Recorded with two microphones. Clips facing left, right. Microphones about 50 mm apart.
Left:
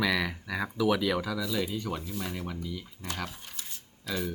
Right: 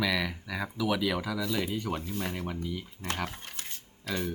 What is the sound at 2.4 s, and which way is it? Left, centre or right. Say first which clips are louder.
Speech: right 2 dB; centre.